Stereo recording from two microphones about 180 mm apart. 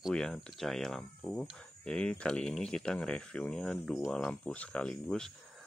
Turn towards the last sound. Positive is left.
turn(degrees=5)  # may be behind; listen again after turning